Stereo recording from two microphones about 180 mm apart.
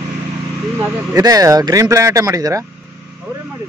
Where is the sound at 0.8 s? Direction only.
20° right (ahead or behind).